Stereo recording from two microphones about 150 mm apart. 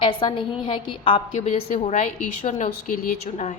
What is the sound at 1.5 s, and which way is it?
A woman's voice, 45° left (ahead or behind).